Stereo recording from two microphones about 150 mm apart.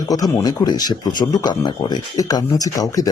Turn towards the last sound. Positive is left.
turn(degrees=25)  # may be behind; listen again after turning